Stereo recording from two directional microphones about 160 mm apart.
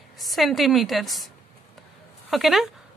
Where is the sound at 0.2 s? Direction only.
Centre (ahead or behind).